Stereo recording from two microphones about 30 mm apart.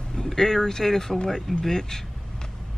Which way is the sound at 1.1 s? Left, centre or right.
Left.